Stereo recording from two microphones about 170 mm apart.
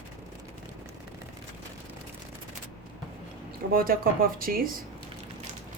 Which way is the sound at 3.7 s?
60° right (ahead or behind).